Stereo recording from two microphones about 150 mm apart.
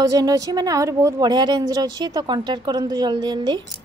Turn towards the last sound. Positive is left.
turn(degrees=-30)  # may be behind; listen again after turning